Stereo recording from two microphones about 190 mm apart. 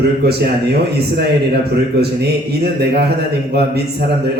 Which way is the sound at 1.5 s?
60° right (ahead or behind).